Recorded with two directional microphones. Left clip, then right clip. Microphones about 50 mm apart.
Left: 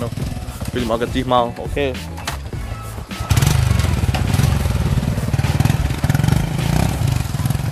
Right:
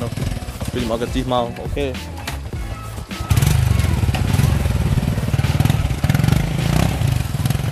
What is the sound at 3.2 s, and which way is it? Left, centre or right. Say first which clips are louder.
Vehicle: left 2 dB; left.